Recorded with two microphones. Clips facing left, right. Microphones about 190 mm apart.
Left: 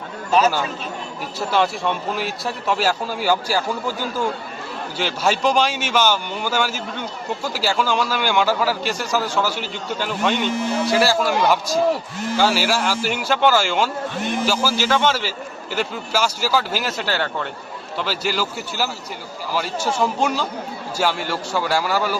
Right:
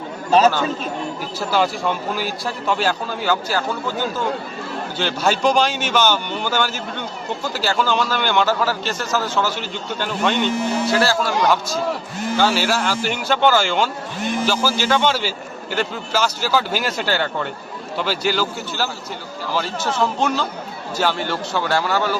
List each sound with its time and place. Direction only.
0.3 s speech: 35° right (ahead or behind)
1.4 s a man's voice: centre (ahead or behind)
4.9 s a man's voice: 5° left (ahead or behind)